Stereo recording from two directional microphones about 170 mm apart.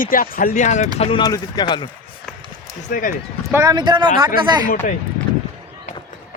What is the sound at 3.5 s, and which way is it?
Speech, 20° right (ahead or behind).